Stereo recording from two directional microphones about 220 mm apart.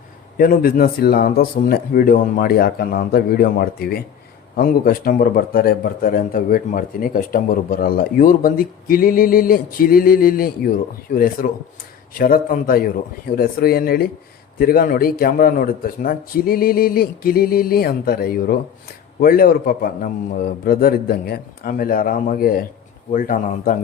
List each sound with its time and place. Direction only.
0.3 s a man's voice: 40° left (ahead or behind)